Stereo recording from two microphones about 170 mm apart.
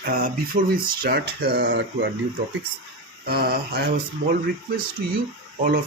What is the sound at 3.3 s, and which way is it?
Speech, 65° right (ahead or behind).